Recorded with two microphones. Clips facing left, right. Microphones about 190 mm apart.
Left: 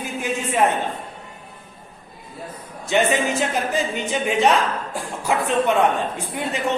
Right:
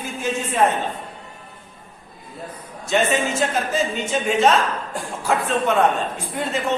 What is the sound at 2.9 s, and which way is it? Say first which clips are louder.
Speech: left 1 dB; 15° left (ahead or behind).